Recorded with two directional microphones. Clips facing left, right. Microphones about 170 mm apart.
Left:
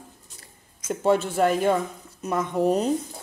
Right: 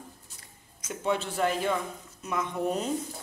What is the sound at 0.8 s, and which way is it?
A man's voice, 45° left (ahead or behind).